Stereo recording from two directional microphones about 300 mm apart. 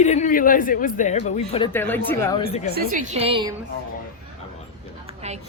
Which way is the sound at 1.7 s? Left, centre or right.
Centre.